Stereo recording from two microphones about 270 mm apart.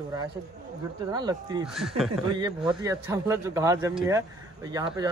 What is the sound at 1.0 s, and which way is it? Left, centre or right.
Speech, centre.